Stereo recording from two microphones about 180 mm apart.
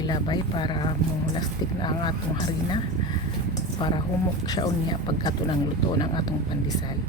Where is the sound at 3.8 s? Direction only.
25° left (ahead or behind).